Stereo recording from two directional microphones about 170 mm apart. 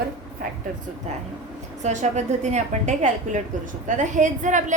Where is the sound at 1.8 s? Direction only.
45° right (ahead or behind).